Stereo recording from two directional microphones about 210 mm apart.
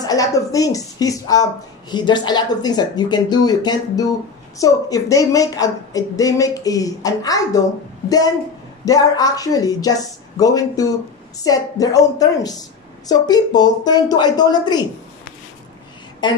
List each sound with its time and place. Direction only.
0.0 s a woman's voice: 15° left (ahead or behind)
8.8 s a woman's voice: 15° left (ahead or behind)
16.2 s a woman's voice: 20° left (ahead or behind)